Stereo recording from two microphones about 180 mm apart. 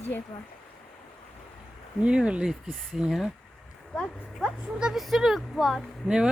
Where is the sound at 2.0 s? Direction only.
5° right (ahead or behind).